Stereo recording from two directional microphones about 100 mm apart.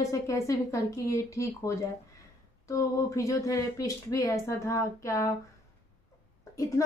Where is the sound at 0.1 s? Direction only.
30° left (ahead or behind).